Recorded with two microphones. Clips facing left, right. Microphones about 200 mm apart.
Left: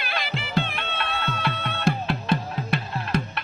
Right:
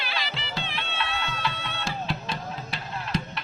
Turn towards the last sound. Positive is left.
turn(degrees=55)  # may be behind; listen again after turning